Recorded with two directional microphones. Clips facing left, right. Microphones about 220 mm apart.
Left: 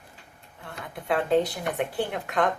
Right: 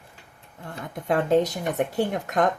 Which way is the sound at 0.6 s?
45° right (ahead or behind).